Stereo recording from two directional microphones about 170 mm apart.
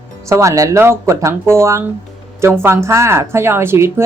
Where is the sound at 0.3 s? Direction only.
15° right (ahead or behind).